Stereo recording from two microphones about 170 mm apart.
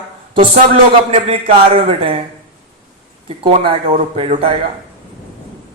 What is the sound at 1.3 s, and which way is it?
Speech, 30° right (ahead or behind).